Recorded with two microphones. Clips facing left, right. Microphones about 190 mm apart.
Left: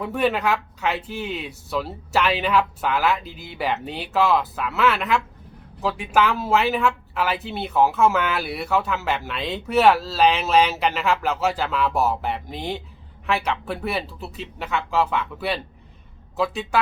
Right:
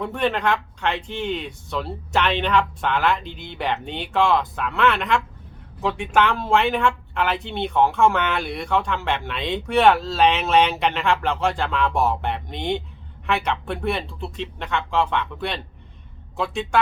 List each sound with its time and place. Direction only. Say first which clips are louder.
0.0 s speech: left 1 dB; 5° left (ahead or behind)